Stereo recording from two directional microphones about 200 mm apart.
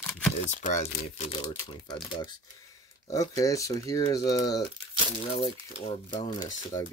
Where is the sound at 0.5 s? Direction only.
35° left (ahead or behind).